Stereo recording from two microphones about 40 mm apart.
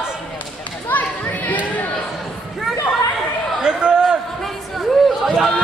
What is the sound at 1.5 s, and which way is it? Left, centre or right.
Chatter, left.